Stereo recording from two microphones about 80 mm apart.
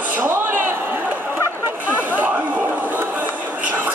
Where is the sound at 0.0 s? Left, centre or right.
Right.